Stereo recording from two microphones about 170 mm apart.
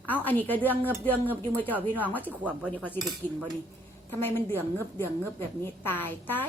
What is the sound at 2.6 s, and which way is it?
Speech, 10° left (ahead or behind).